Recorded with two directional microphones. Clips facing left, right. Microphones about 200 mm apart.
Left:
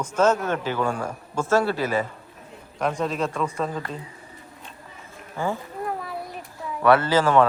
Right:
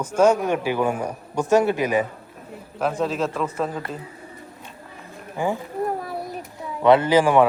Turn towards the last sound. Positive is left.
turn(degrees=-15)  # may be behind; listen again after turning